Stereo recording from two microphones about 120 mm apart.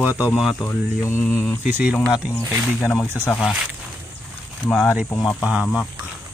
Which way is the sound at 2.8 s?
20° left (ahead or behind).